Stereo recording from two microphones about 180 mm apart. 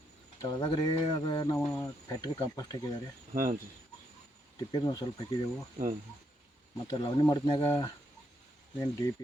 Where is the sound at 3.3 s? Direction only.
50° right (ahead or behind).